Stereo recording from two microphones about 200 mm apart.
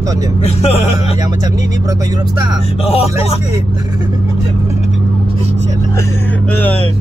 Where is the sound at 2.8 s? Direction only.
30° left (ahead or behind).